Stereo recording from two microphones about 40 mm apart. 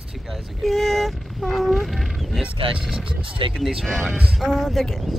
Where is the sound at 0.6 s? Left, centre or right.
Centre.